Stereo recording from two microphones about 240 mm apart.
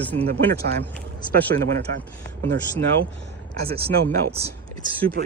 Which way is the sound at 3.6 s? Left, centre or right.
Right.